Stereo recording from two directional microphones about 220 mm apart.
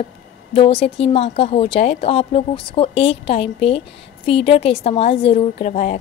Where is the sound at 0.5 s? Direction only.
25° left (ahead or behind).